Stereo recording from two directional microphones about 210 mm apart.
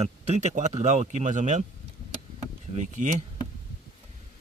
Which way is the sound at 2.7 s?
35° right (ahead or behind).